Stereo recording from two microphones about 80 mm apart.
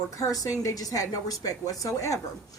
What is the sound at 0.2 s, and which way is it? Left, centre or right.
A woman's voice, left.